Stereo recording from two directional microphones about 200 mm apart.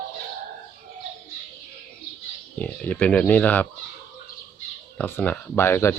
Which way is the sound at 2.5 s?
5° left (ahead or behind).